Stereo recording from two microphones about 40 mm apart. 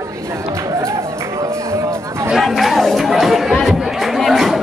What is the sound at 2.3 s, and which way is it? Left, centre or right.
Chatter, centre.